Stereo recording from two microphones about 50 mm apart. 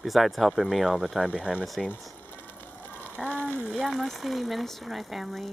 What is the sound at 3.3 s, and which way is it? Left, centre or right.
Frying, left.